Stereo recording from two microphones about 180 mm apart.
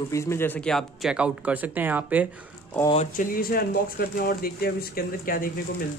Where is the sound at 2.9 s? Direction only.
50° left (ahead or behind).